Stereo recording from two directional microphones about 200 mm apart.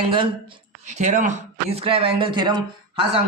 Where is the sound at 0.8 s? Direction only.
35° right (ahead or behind).